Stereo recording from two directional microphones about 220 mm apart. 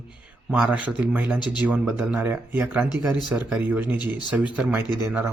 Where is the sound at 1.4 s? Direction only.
20° left (ahead or behind).